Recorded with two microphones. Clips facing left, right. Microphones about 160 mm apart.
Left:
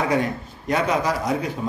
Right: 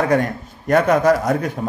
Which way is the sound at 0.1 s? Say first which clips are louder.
Right 4 dB; 50° right (ahead or behind).